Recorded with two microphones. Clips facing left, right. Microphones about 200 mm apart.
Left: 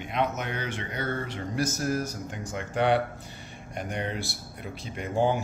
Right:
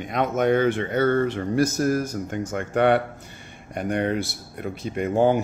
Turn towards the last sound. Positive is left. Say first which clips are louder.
# right 6 dB
turn(degrees=-55)  # may be behind; listen again after turning